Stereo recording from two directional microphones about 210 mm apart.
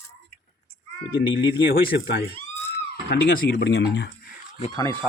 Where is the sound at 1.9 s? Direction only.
50° left (ahead or behind).